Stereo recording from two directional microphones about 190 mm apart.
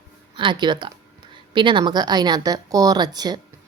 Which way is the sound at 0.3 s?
25° right (ahead or behind).